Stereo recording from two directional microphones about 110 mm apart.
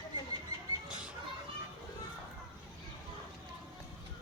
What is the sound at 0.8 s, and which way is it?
Children playing, 10° right (ahead or behind).